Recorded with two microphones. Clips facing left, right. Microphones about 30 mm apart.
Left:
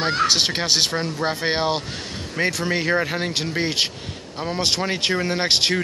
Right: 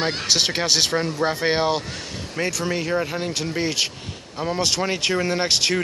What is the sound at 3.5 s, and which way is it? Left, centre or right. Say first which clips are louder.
Speech: left 1 dB; left.